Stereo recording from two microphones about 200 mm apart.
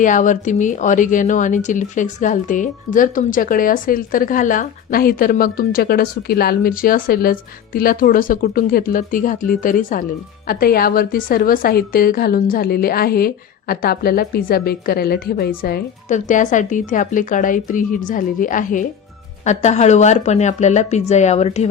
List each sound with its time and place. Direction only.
0.0 s speech: 40° left (ahead or behind)